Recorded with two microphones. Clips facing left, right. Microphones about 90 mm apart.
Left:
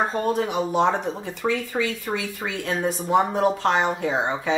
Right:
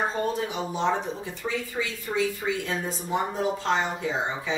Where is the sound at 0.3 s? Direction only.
60° left (ahead or behind).